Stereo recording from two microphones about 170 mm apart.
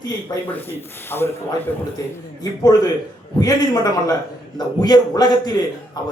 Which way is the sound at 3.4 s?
20° left (ahead or behind).